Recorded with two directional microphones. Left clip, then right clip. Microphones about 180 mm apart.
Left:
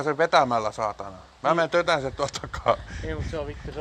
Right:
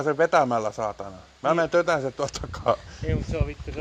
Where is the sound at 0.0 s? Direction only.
20° right (ahead or behind).